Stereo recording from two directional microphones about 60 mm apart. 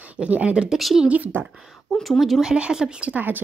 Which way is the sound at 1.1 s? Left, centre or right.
Right.